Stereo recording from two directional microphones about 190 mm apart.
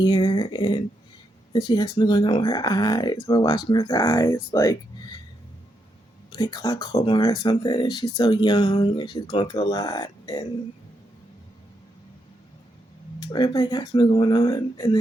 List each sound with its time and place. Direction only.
0.0 s speech: 20° left (ahead or behind)
6.3 s speech: 20° left (ahead or behind)
13.3 s speech: 20° left (ahead or behind)